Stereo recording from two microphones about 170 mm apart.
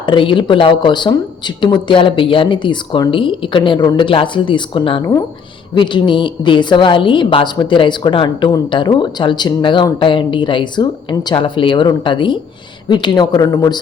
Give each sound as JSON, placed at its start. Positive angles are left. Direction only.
{"t": 0.0, "sound": "a woman's voice", "side_deg": 30}